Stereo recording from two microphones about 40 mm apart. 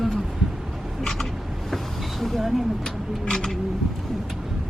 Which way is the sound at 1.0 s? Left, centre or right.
Centre.